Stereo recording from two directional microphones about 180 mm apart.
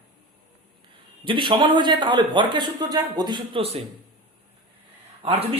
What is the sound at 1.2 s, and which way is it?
A man's voice, 25° right (ahead or behind).